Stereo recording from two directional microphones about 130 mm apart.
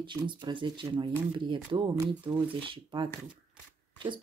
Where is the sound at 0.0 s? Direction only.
35° right (ahead or behind).